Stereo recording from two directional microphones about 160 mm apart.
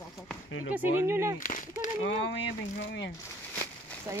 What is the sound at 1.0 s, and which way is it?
Speech, 15° right (ahead or behind).